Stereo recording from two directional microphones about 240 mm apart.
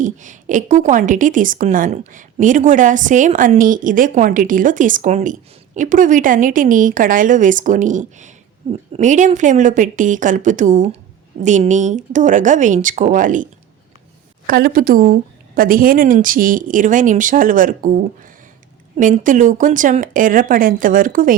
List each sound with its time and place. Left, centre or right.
0.0 s a woman's voice: right